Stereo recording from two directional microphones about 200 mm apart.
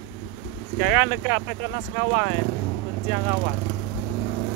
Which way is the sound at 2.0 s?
25° right (ahead or behind).